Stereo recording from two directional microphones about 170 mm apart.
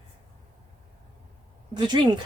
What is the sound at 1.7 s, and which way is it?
Speech, 25° right (ahead or behind).